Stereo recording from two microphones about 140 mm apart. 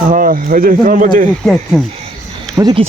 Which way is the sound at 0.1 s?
80° right.